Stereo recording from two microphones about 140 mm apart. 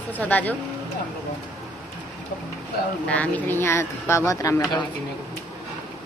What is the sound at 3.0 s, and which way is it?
Speech, 10° left (ahead or behind).